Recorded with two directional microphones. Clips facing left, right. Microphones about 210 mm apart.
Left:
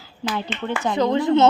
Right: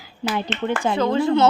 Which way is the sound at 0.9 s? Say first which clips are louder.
Left 2 dB; 20° left (ahead or behind).